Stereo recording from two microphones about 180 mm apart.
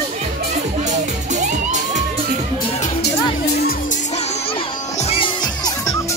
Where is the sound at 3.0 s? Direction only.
65° left (ahead or behind).